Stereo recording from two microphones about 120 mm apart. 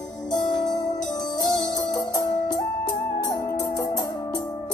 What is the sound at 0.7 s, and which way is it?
Music, 35° left (ahead or behind).